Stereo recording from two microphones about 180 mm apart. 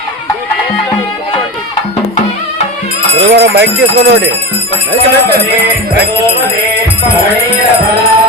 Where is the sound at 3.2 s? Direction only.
70° right (ahead or behind).